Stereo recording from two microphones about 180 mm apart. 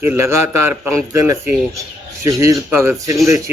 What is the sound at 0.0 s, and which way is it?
Speech, 15° right (ahead or behind).